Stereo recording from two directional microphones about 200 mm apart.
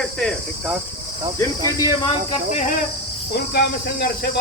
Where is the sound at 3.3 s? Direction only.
50° left (ahead or behind).